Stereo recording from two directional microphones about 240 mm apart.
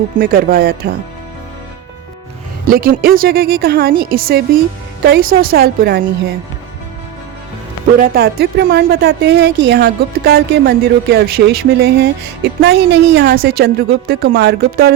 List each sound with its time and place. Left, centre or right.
0.2 s a woman's voice: right
2.6 s a woman's voice: right
7.9 s a woman's voice: right